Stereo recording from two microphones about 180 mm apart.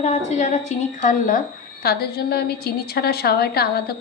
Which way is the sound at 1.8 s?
60° left (ahead or behind).